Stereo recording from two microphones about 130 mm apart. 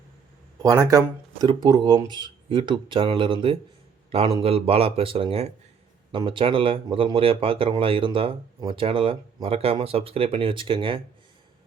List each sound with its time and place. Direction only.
0.6 s speech: 25° right (ahead or behind)